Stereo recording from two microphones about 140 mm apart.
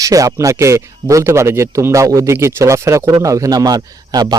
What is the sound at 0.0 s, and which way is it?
A man's voice, 25° right (ahead or behind).